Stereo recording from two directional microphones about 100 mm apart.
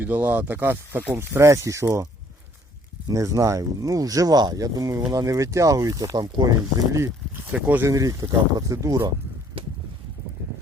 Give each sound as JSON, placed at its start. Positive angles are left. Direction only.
{"t": 0.0, "sound": "speech", "side_deg": -15}
{"t": 3.1, "sound": "speech", "side_deg": -30}
{"t": 7.5, "sound": "speech", "side_deg": -15}
{"t": 7.9, "sound": "speech", "side_deg": -35}